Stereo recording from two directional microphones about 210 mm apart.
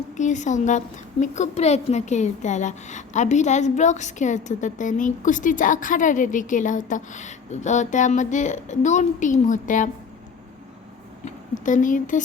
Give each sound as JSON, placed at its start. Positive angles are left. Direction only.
{"t": 0.2, "sound": "a woman's voice", "side_deg": 35}
{"t": 11.3, "sound": "speech", "side_deg": 35}